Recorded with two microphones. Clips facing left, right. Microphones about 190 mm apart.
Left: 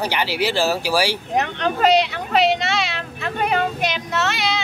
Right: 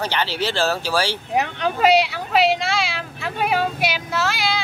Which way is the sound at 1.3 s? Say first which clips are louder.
Left 1 dB; 10° right (ahead or behind).